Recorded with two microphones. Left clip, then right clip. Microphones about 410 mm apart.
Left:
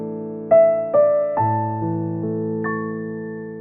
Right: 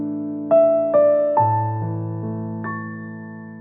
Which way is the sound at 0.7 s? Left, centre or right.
Centre.